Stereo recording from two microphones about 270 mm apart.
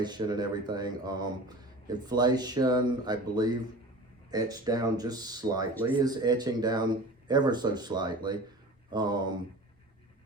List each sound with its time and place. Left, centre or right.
0.0 s speech: centre